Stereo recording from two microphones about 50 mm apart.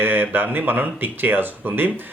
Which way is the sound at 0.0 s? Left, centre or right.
Right.